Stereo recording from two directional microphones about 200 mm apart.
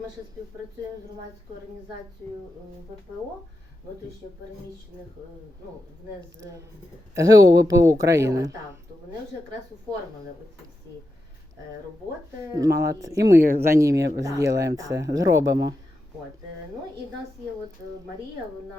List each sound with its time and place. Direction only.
7.2 s speech: 20° right (ahead or behind)
12.5 s speech: 15° right (ahead or behind)